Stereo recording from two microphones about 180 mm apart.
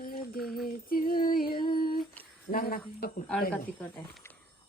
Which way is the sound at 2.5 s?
50° left (ahead or behind).